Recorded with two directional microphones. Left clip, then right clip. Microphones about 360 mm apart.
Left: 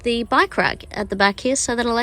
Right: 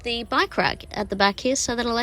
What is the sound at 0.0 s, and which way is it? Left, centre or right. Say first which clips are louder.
A woman's voice: left 5 dB; centre.